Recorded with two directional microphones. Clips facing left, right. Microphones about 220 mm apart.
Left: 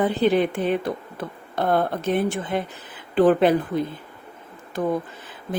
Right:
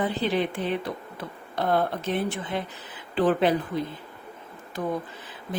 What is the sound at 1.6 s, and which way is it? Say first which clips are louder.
Speech: left 3 dB; 50° left (ahead or behind).